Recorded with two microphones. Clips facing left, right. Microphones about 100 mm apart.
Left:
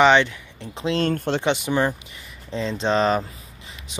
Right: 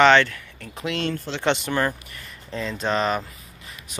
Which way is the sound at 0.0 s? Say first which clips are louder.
Even; 15° left (ahead or behind).